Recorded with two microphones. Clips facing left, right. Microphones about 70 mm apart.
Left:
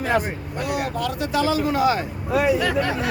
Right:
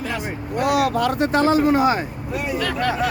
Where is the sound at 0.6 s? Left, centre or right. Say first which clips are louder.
Right 6 dB; right.